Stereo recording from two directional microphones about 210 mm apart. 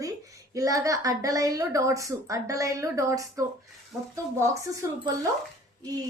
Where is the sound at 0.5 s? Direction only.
15° right (ahead or behind).